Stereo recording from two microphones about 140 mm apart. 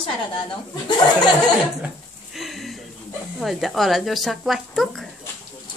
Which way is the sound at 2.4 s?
Centre (ahead or behind).